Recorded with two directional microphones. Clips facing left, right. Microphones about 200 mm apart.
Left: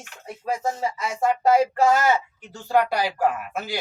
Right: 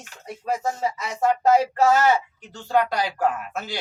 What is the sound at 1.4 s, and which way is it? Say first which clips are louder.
Speech: even; 10° left (ahead or behind).